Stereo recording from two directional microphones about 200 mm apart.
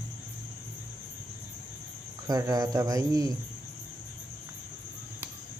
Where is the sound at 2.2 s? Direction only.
20° right (ahead or behind).